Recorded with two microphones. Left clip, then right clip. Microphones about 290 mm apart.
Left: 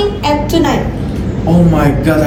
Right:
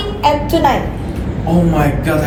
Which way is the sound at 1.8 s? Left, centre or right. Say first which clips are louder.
Left 3 dB; centre.